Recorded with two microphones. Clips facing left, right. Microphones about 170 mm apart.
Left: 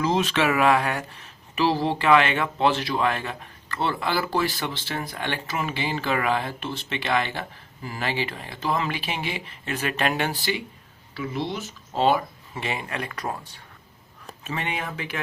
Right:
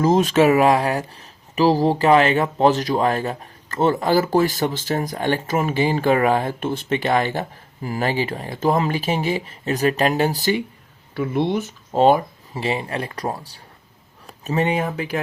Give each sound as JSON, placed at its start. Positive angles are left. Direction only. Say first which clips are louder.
{"t": 0.0, "sound": "speech", "louder": "right 7 dB", "side_deg": -45}
{"t": 11.1, "sound": "speech", "louder": "right 8 dB", "side_deg": -55}
{"t": 12.5, "sound": "speech", "louder": "right 6 dB", "side_deg": -30}